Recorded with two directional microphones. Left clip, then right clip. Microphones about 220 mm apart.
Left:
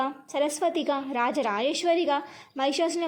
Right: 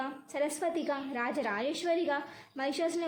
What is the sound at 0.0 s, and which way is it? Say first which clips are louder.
A woman's voice: left 7 dB; 25° left (ahead or behind).